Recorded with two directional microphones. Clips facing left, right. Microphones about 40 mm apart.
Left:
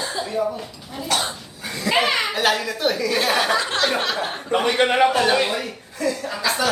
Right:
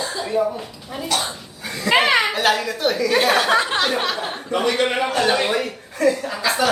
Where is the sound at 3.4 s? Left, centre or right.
Right.